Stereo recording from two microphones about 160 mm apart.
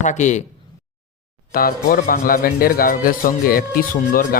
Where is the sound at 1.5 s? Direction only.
65° left (ahead or behind).